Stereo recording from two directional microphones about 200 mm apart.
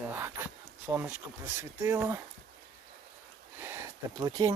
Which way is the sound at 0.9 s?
10° right (ahead or behind).